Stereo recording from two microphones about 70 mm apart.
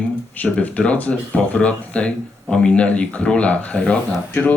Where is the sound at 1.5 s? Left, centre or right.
Centre.